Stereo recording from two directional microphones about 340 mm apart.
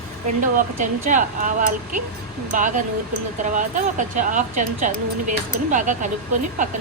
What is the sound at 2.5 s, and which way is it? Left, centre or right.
Speech, right.